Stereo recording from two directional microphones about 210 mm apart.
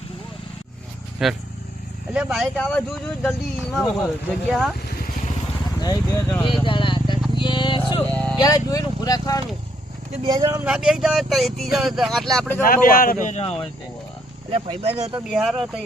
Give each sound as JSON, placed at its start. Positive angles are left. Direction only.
{"t": 1.2, "sound": "speech", "side_deg": 0}
{"t": 5.8, "sound": "speech", "side_deg": 15}
{"t": 6.4, "sound": "vehicle", "side_deg": 25}
{"t": 8.1, "sound": "vehicle", "side_deg": 5}
{"t": 8.4, "sound": "speech", "side_deg": 15}
{"t": 10.2, "sound": "speech", "side_deg": -15}
{"t": 10.7, "sound": "speech", "side_deg": -5}
{"t": 12.6, "sound": "speech", "side_deg": 45}
{"t": 14.5, "sound": "speech", "side_deg": -30}
{"t": 15.3, "sound": "speech", "side_deg": 0}